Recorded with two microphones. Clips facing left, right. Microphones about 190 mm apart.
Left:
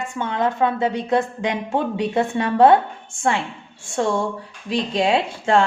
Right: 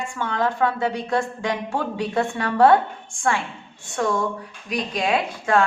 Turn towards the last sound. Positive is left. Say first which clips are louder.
# left 2 dB
turn(degrees=25)  # may be behind; listen again after turning